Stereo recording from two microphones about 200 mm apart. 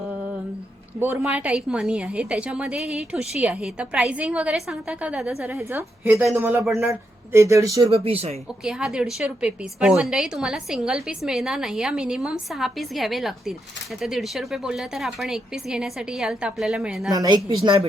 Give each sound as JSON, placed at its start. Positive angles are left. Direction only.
{"t": 0.9, "sound": "a woman's voice", "side_deg": -10}
{"t": 7.9, "sound": "a woman's voice", "side_deg": -30}
{"t": 8.6, "sound": "a woman's voice", "side_deg": -5}
{"t": 17.1, "sound": "a woman's voice", "side_deg": -20}